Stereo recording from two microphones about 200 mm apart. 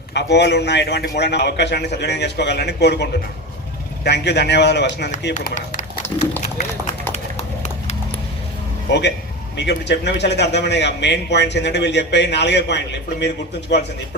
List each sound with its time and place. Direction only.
0.1 s a man's voice: 60° left (ahead or behind)
5.3 s speech: 35° left (ahead or behind)
7.1 s clip-clop: 35° left (ahead or behind)
8.9 s a man's voice: 60° left (ahead or behind)